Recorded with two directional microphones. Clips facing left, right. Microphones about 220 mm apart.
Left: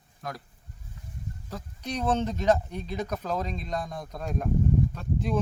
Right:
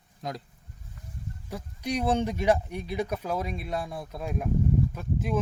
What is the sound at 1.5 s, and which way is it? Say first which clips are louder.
Speech: right 4 dB; 10° right (ahead or behind).